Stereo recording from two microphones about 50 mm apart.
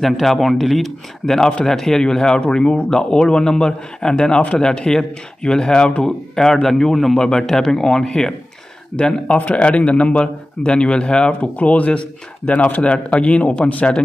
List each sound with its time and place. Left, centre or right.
0.0 s speech: centre
8.9 s a man's voice: centre